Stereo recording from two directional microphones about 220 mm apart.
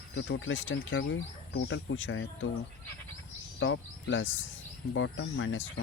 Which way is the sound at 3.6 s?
60° left (ahead or behind).